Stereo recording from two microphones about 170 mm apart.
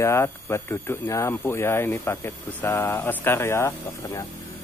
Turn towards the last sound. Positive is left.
turn(degrees=15)  # may be behind; listen again after turning